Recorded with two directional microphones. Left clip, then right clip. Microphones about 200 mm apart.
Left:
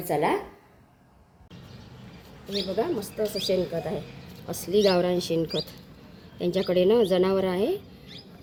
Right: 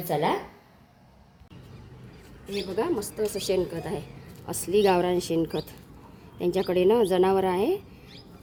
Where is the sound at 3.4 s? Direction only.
15° right (ahead or behind).